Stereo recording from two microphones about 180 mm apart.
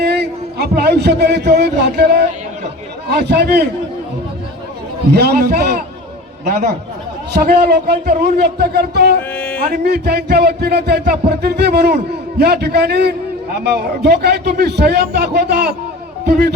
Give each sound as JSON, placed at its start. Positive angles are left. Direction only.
{"t": 0.0, "sound": "a man's voice", "side_deg": -65}
{"t": 5.1, "sound": "a man's voice", "side_deg": -60}
{"t": 7.4, "sound": "a man's voice", "side_deg": -60}
{"t": 9.3, "sound": "a sound", "side_deg": 5}
{"t": 9.6, "sound": "a man's voice", "side_deg": -60}